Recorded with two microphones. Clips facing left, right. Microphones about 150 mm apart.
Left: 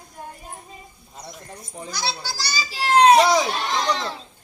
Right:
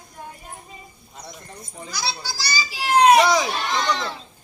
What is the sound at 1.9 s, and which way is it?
Speech, 25° left (ahead or behind).